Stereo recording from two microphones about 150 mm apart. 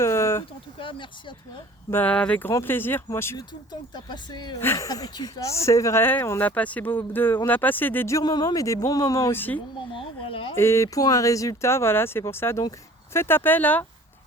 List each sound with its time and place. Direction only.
0.0 s a sound: 20° left (ahead or behind)
0.8 s speech: 35° left (ahead or behind)
1.9 s speech: 10° left (ahead or behind)
3.7 s speech: 30° left (ahead or behind)
4.6 s speech: 20° left (ahead or behind)
9.9 s speech: 35° left (ahead or behind)
10.5 s speech: 15° left (ahead or behind)